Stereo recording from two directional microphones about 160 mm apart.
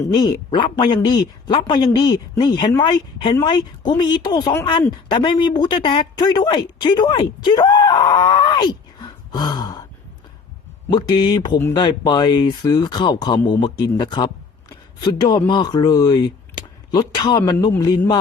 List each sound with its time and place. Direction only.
0.1 s speech: 25° left (ahead or behind)
10.8 s speech: 30° left (ahead or behind)